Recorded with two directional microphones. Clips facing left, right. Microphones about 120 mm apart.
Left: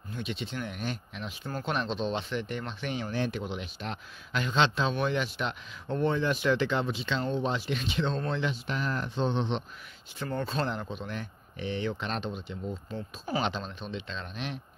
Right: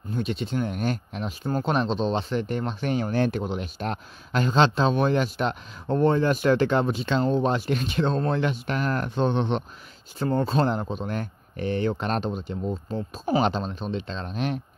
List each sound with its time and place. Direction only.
0.1 s speech: 40° right (ahead or behind)
10.1 s speech: 35° right (ahead or behind)